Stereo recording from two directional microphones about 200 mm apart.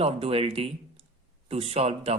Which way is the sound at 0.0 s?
30° right (ahead or behind).